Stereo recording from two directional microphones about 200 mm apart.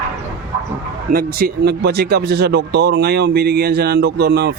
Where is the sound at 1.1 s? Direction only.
50° right (ahead or behind).